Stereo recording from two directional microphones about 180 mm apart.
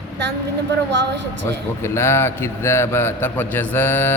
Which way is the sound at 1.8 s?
15° left (ahead or behind).